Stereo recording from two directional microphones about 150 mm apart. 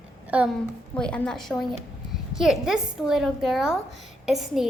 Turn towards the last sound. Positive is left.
turn(degrees=0)  # may be behind; listen again after turning